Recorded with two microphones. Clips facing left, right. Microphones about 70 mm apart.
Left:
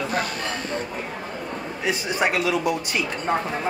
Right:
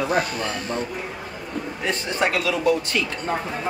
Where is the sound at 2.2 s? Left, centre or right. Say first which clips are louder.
Right 1 dB; centre.